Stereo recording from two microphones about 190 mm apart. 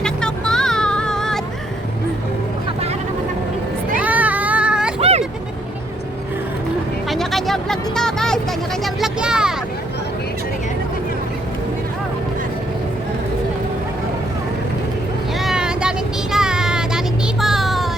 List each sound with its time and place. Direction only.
0.0 s vehicle: 5° left (ahead or behind)
4.0 s a sound: 10° right (ahead or behind)
4.9 s vehicle: 30° right (ahead or behind)
7.1 s a sound: centre (ahead or behind)
8.8 s vehicle: 5° right (ahead or behind)
15.4 s vehicle: 5° right (ahead or behind)
17.4 s music: centre (ahead or behind)